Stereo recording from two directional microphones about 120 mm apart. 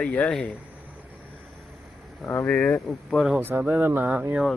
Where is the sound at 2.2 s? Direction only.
15° left (ahead or behind).